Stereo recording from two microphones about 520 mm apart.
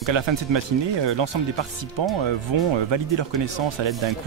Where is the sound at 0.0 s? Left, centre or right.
Right.